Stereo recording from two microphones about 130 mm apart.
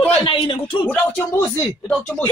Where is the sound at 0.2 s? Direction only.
45° left (ahead or behind).